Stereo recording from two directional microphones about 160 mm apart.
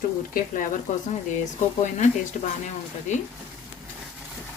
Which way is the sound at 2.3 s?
50° left (ahead or behind).